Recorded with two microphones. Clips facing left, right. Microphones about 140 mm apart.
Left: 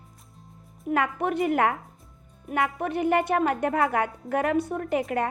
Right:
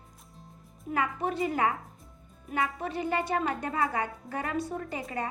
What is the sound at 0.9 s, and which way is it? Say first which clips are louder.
A woman's voice: left 5 dB; 60° left (ahead or behind).